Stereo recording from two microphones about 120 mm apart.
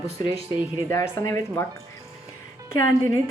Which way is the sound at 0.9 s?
25° left (ahead or behind).